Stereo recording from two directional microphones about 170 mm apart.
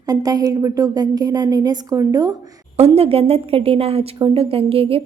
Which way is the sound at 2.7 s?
35° right (ahead or behind).